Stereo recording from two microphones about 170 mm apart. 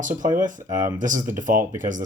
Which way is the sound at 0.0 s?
50° right (ahead or behind).